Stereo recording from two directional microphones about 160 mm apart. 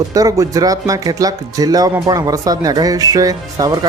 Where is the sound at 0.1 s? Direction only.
20° right (ahead or behind).